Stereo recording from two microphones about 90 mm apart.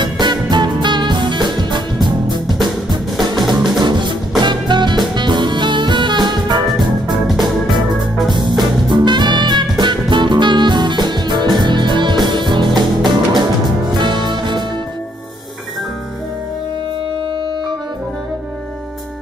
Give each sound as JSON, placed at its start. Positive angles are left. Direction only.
{"t": 0.0, "sound": "music", "side_deg": -55}
{"t": 7.1, "sound": "organ", "side_deg": -55}
{"t": 8.3, "sound": "music", "side_deg": -55}